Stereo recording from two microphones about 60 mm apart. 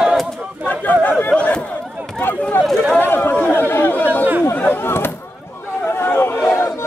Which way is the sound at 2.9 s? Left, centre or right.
Left.